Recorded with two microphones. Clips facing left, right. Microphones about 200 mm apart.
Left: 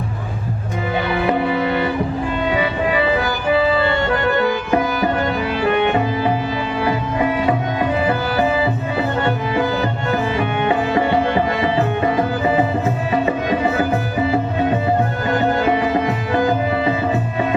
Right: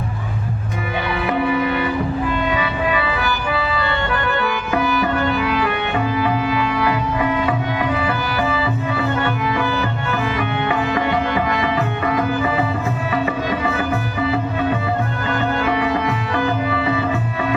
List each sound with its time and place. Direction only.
1.2 s music: 25° left (ahead or behind)
3.6 s music: 40° left (ahead or behind)
4.1 s music: 25° left (ahead or behind)
9.2 s music: 35° left (ahead or behind)